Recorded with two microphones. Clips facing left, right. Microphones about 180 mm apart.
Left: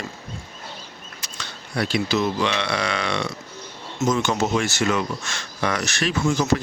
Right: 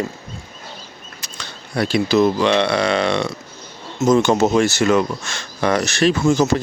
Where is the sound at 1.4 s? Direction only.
30° right (ahead or behind).